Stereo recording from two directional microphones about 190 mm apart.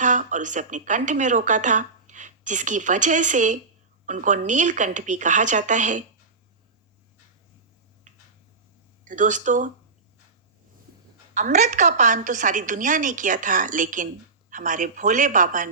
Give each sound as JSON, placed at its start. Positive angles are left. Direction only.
{"t": 0.0, "sound": "speech", "side_deg": -40}
{"t": 9.0, "sound": "speech", "side_deg": -40}
{"t": 11.3, "sound": "a woman's voice", "side_deg": -40}